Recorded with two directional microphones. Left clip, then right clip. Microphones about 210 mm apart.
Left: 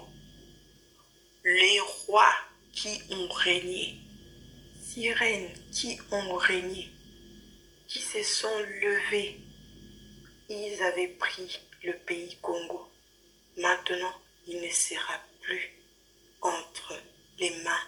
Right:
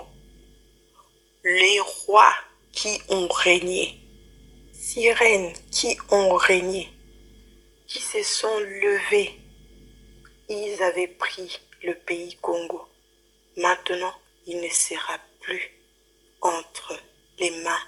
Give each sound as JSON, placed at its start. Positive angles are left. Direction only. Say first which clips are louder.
{"t": 1.4, "sound": "a woman's voice", "louder": "right 4 dB", "side_deg": -45}
{"t": 4.9, "sound": "a woman's voice", "louder": "right 10 dB", "side_deg": -45}
{"t": 7.9, "sound": "a woman's voice", "louder": "right 5 dB", "side_deg": -45}
{"t": 10.4, "sound": "a woman's voice", "louder": "right 6 dB", "side_deg": -45}